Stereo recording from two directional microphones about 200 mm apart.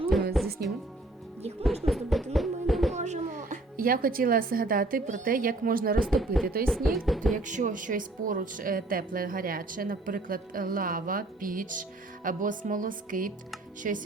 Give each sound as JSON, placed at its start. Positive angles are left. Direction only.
{"t": 0.4, "sound": "music", "side_deg": 0}
{"t": 1.6, "sound": "a sound", "side_deg": 0}
{"t": 2.3, "sound": "music", "side_deg": 0}
{"t": 2.9, "sound": "speech", "side_deg": -35}
{"t": 6.0, "sound": "speech", "side_deg": 0}
{"t": 7.3, "sound": "a woman's voice", "side_deg": -40}